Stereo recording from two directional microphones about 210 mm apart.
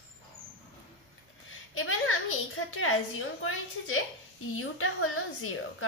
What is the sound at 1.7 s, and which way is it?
A woman's voice, 80° left.